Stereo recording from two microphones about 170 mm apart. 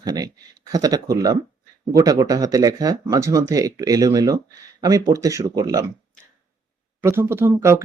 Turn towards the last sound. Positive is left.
turn(degrees=-15)  # may be behind; listen again after turning